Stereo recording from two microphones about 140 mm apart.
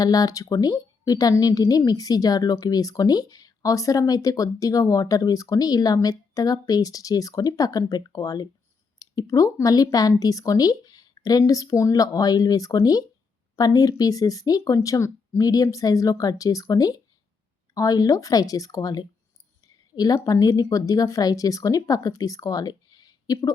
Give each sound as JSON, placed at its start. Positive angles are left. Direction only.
{"t": 0.0, "sound": "a woman's voice", "side_deg": 25}